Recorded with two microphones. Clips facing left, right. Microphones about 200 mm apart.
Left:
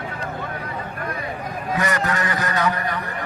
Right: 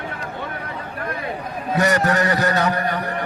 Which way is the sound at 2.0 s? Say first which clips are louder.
Right 5 dB; 35° right (ahead or behind).